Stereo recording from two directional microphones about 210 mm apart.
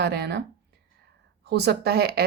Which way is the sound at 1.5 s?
50° right (ahead or behind).